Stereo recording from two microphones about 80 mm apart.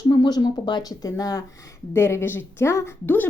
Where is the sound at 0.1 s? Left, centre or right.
Left.